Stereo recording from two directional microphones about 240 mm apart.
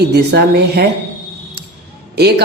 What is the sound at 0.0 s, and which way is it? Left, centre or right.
Speech, right.